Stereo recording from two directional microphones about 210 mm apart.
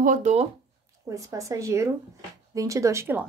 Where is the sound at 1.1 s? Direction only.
15° right (ahead or behind).